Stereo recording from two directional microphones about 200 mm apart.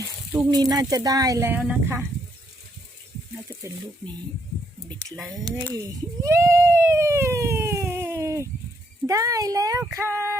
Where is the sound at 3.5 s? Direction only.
15° right (ahead or behind).